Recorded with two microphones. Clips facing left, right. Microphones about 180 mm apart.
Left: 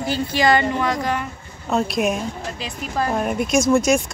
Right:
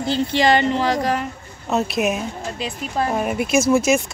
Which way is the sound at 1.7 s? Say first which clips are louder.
Even; 5° right (ahead or behind).